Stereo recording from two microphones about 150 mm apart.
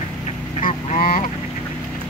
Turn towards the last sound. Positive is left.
turn(degrees=70)  # may be behind; listen again after turning